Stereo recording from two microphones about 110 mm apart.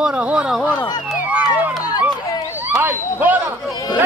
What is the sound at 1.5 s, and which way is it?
Run, 40° left (ahead or behind).